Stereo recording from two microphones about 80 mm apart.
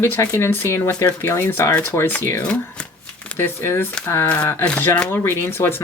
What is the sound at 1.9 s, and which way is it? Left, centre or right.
Speech, left.